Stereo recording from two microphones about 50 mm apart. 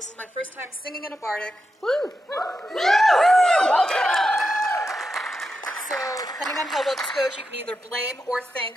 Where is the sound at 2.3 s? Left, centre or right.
Left.